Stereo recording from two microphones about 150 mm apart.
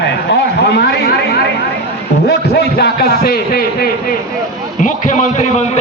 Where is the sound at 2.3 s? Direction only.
90° left.